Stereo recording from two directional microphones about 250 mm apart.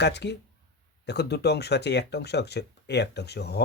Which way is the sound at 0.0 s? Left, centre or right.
Left.